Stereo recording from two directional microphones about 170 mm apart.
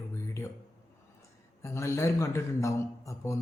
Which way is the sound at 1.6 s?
15° left (ahead or behind).